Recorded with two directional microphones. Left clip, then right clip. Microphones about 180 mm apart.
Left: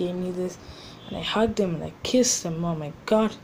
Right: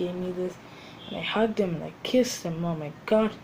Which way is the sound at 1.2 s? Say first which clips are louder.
Left 2 dB; 15° left (ahead or behind).